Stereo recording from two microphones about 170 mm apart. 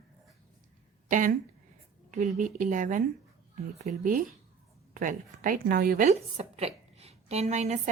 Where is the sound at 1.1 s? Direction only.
50° right (ahead or behind).